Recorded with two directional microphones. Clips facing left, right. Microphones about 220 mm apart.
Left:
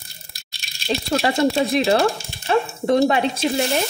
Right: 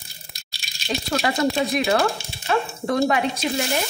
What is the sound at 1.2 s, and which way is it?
Speech, 30° left (ahead or behind).